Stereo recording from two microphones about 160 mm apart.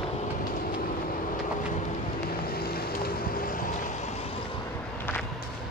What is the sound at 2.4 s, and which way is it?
Vehicle, 70° left (ahead or behind).